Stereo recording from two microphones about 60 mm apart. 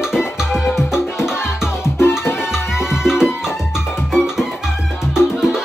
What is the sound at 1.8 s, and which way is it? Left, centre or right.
Music, left.